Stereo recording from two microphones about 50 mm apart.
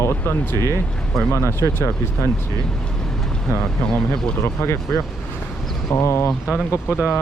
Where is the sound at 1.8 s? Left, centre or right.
Left.